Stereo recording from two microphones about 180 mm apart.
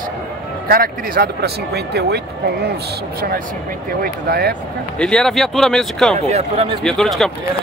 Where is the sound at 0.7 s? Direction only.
55° right (ahead or behind).